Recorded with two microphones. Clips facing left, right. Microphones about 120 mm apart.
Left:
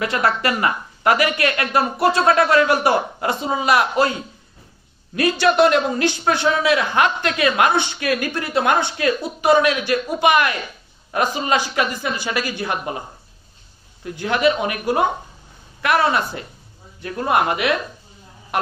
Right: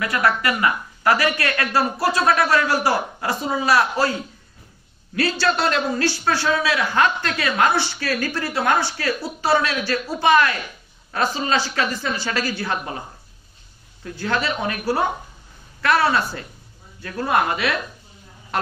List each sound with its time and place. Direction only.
0.0 s a man's voice: 25° left (ahead or behind)
14.1 s a man's voice: 15° left (ahead or behind)